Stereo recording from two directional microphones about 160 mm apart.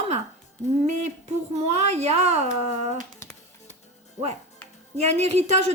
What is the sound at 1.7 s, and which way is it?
Speech, 40° right (ahead or behind).